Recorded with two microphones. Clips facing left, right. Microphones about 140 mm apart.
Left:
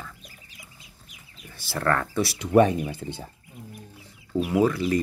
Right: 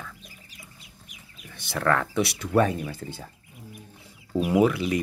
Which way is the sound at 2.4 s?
20° left (ahead or behind).